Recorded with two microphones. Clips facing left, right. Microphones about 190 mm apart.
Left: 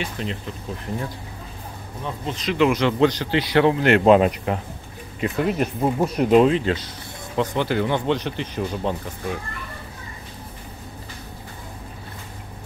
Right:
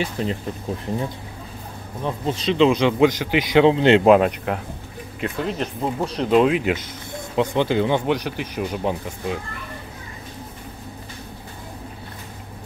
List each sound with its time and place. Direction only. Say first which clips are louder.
0.0 s speech: right 4 dB; 40° right (ahead or behind)
2.2 s speech: right 2 dB; 30° right (ahead or behind)
4.0 s speech: even; centre (ahead or behind)
6.5 s speech: even; 15° right (ahead or behind)